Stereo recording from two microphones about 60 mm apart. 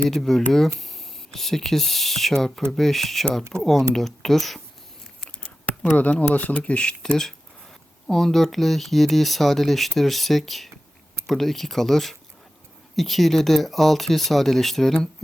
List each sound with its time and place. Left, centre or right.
0.2 s speech: centre
5.4 s speech: left
8.0 s speech: centre